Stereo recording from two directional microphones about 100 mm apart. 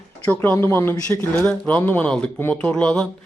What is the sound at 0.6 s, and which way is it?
Speech, 25° left (ahead or behind).